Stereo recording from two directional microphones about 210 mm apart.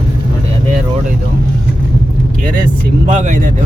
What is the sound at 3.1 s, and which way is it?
Speech, 40° right (ahead or behind).